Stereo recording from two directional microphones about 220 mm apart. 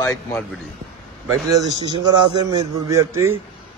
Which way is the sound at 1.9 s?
20° right (ahead or behind).